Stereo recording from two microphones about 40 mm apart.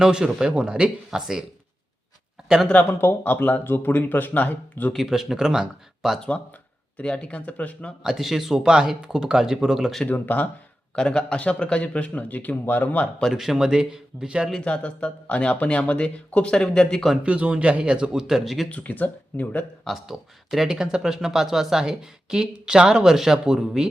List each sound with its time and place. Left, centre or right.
0.0 s speech: centre
3.0 s speech: left
4.4 s speech: left
4.9 s speech: centre
6.9 s a man's voice: left
8.0 s speech: centre
10.1 s speech: left
10.9 s a man's voice: left
13.3 s speech: centre
14.6 s a man's voice: left
16.6 s speech: centre
17.2 s speech: right; by 18.7 s centre
18.7 s speech: left
20.1 s speech: centre